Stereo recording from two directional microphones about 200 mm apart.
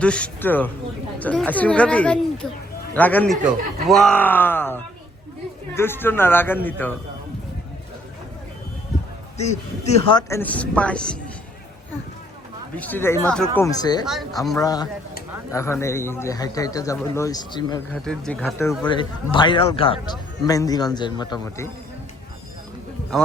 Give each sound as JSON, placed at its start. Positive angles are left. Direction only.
{"t": 0.0, "sound": "speech", "side_deg": 5}
{"t": 9.4, "sound": "a man's voice", "side_deg": 35}
{"t": 10.2, "sound": "speech", "side_deg": 10}
{"t": 12.7, "sound": "speech", "side_deg": 10}
{"t": 13.6, "sound": "a man's voice", "side_deg": 20}
{"t": 14.0, "sound": "speech", "side_deg": 0}
{"t": 14.6, "sound": "a man's voice", "side_deg": 20}
{"t": 18.0, "sound": "speech", "side_deg": 5}
{"t": 18.9, "sound": "a man's voice", "side_deg": 25}